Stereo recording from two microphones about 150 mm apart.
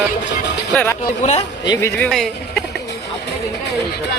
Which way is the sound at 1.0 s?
50° left (ahead or behind).